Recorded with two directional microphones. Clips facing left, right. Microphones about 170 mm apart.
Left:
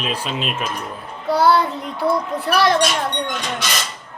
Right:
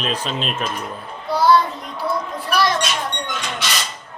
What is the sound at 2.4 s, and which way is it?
Speech, 65° left (ahead or behind).